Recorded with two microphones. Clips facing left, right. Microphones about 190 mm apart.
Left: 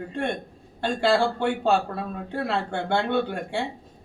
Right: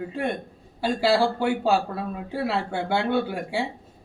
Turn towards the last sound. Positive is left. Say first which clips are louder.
# even
turn(degrees=-5)  # may be behind; listen again after turning